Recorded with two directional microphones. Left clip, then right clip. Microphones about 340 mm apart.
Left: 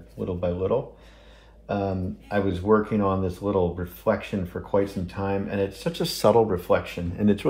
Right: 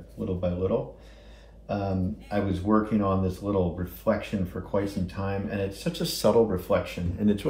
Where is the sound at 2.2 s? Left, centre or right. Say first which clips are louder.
Left 5 dB; left.